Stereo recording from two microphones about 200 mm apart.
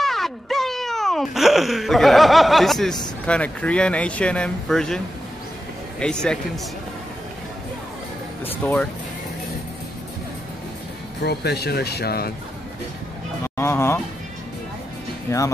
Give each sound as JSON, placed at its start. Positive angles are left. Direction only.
{"t": 0.0, "sound": "wail", "side_deg": 0}
{"t": 3.3, "sound": "speech", "side_deg": 5}
{"t": 8.6, "sound": "speech", "side_deg": 10}
{"t": 11.2, "sound": "speech", "side_deg": 55}
{"t": 13.6, "sound": "speech", "side_deg": 15}
{"t": 15.2, "sound": "speech", "side_deg": 15}